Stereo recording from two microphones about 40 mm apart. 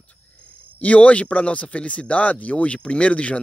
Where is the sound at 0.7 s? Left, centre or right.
Left.